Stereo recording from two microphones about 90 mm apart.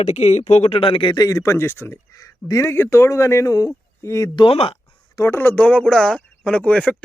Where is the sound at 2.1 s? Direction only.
40° left (ahead or behind).